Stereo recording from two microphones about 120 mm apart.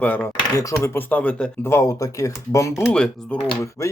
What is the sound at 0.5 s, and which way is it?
Speech, 25° left (ahead or behind).